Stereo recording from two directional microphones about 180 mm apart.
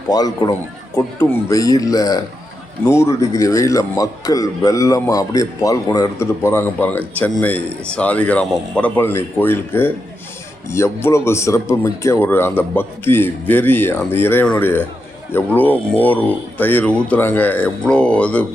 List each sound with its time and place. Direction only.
0.1 s a man's voice: 20° left (ahead or behind)